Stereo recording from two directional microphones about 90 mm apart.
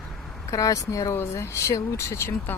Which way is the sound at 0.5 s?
40° left (ahead or behind).